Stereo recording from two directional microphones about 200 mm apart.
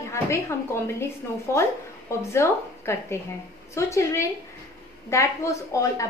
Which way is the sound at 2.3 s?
15° left (ahead or behind).